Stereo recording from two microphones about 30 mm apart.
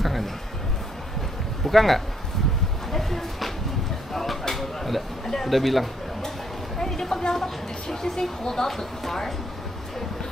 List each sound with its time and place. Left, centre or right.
0.0 s music: centre
1.6 s speech: centre
2.9 s a sound: centre
5.5 s speech: centre
6.9 s speech: centre